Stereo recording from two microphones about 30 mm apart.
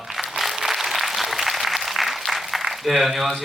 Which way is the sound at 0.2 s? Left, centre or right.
Centre.